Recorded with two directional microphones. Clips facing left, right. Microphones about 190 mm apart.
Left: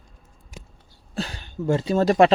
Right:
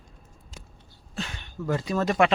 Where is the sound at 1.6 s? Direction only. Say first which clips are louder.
Left 6 dB; 25° left (ahead or behind).